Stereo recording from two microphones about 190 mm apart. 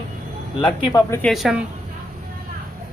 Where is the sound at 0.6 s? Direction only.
20° left (ahead or behind).